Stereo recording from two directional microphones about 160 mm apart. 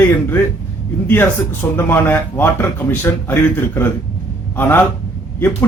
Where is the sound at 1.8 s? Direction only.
15° left (ahead or behind).